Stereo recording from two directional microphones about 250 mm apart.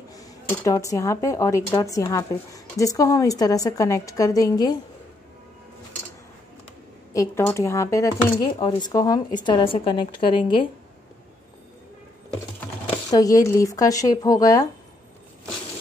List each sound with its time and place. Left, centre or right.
0.1 s speech: centre
7.1 s a woman's voice: centre
13.1 s speech: centre